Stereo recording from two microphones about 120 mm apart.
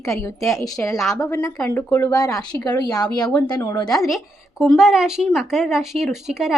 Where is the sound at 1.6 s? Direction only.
20° left (ahead or behind).